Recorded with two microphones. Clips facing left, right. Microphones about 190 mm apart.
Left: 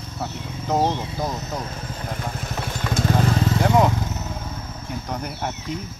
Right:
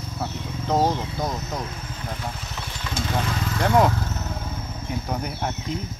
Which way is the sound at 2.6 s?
50° left (ahead or behind).